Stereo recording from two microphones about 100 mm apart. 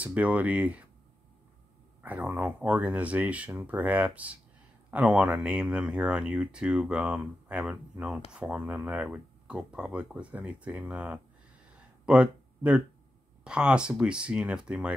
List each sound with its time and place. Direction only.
0.0 s speech: 15° right (ahead or behind)
2.0 s speech: 15° right (ahead or behind)